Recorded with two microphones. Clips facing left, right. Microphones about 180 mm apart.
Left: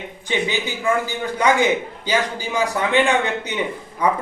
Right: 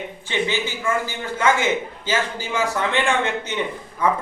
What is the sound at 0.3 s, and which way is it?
A man's voice, 15° left (ahead or behind).